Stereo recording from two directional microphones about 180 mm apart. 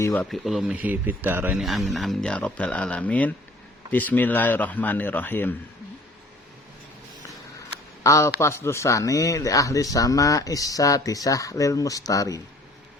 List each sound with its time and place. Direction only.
0.1 s speech: 5° left (ahead or behind)
8.0 s speech: 15° left (ahead or behind)